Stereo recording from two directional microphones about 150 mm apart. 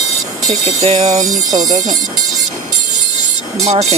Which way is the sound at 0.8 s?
40° right (ahead or behind).